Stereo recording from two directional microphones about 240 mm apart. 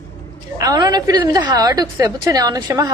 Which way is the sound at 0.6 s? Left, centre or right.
Centre.